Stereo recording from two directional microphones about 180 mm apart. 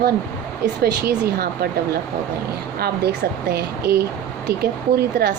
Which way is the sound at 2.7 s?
60° right (ahead or behind).